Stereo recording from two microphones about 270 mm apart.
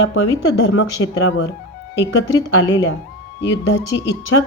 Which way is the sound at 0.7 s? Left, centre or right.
Left.